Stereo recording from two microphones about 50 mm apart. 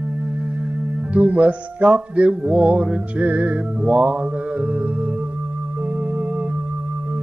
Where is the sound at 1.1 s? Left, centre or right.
Right.